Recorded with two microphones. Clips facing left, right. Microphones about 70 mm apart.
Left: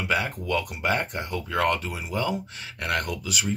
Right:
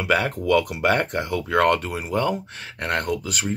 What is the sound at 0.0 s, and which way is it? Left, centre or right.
Speech, right.